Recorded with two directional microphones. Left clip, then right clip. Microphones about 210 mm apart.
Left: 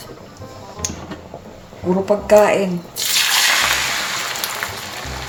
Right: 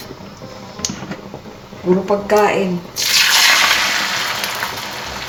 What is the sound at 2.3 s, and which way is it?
Speech, 55° left (ahead or behind).